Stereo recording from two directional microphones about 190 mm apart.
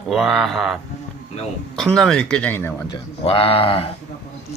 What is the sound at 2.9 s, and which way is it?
Speech, 30° left (ahead or behind).